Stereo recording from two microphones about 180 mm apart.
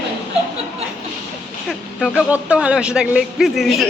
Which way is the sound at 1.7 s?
Centre (ahead or behind).